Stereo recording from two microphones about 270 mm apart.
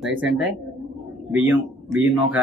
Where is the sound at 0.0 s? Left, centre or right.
Centre.